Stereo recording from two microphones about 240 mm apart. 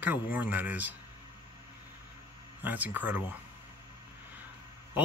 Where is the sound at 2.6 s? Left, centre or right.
Centre.